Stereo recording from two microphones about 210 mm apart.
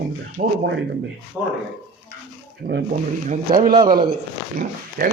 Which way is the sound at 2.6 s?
45° right (ahead or behind).